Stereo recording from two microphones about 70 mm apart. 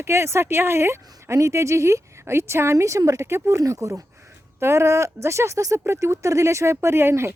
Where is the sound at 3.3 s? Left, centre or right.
Right.